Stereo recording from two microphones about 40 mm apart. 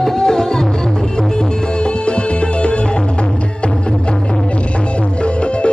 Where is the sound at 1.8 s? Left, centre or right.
Left.